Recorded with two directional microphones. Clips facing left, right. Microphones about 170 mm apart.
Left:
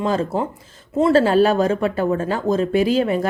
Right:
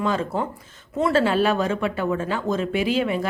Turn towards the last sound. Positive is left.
turn(degrees=40)  # may be behind; listen again after turning